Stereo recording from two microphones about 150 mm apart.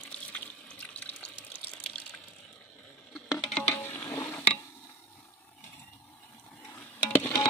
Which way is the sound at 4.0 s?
15° left (ahead or behind).